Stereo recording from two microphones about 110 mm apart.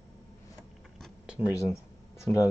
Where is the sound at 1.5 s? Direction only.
30° left (ahead or behind).